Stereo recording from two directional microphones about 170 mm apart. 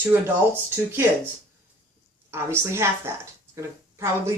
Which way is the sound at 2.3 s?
15° right (ahead or behind).